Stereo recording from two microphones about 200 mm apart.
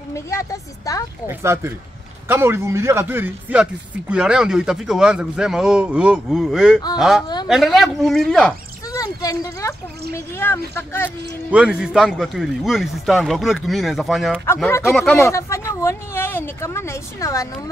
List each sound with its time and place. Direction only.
0.1 s speech: 15° left (ahead or behind)
1.4 s a man's voice: 15° right (ahead or behind); by 8.5 s 5° left (ahead or behind)
8.9 s a sound: 15° left (ahead or behind)
10.1 s speech: 10° left (ahead or behind)
11.5 s a man's voice: 5° right (ahead or behind); by 17.5 s 15° left (ahead or behind)